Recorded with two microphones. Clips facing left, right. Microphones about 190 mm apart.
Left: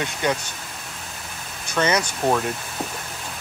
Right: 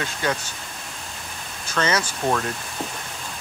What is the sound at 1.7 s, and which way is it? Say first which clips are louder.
Speech: left 2 dB; 15° left (ahead or behind).